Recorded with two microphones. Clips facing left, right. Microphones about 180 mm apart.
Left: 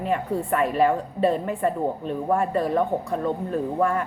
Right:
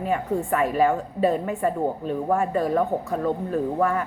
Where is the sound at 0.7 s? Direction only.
30° left (ahead or behind).